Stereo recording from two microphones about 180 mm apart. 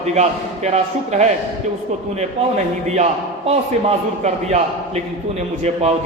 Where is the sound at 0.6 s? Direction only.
40° right (ahead or behind).